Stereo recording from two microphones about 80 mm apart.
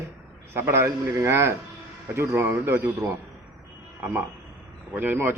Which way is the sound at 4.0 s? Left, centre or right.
Right.